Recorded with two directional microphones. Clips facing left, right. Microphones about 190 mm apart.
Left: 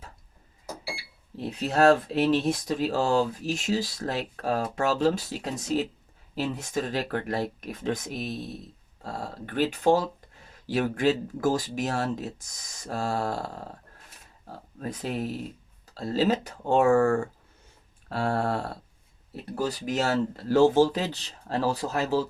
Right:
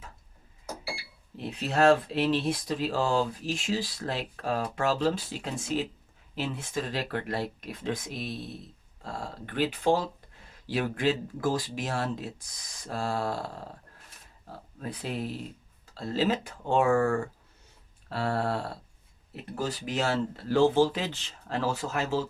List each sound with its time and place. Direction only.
1.4 s speech: 40° left (ahead or behind)
14.8 s speech: 45° left (ahead or behind)